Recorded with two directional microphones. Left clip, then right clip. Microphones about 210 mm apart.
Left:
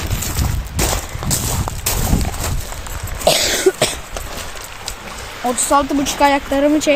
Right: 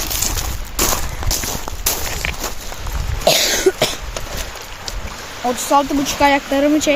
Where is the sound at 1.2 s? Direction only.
20° left (ahead or behind).